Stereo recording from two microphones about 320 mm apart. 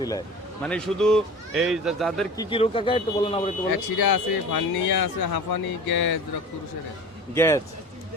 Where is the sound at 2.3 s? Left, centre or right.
Centre.